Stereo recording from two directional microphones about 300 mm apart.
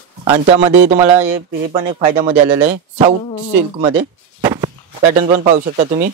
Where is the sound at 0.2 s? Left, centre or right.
Centre.